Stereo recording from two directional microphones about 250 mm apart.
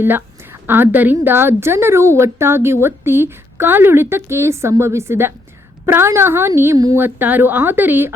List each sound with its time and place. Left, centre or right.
0.0 s a woman's voice: centre